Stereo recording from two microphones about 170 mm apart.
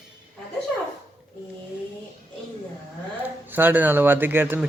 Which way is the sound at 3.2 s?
10° right (ahead or behind).